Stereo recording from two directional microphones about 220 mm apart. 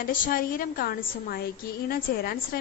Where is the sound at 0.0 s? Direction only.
40° left (ahead or behind).